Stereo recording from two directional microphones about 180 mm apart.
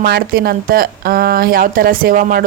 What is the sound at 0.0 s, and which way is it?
Speech, 60° right (ahead or behind).